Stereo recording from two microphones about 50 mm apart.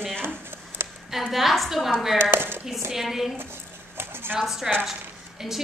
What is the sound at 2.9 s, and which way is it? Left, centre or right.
Speech, centre.